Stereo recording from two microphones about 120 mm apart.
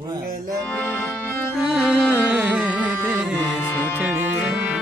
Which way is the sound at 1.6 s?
5° right (ahead or behind).